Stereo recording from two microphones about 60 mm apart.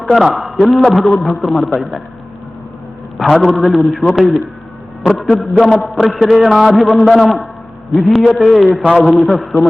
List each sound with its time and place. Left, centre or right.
0.0 s a man's voice: centre
3.2 s a man's voice: centre
8.8 s a man's voice: centre
9.1 s a man's voice: centre